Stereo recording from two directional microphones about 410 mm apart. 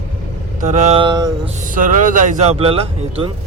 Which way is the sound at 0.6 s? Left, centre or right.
Centre.